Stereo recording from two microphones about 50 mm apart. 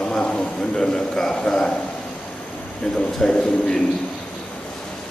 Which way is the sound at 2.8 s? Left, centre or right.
Centre.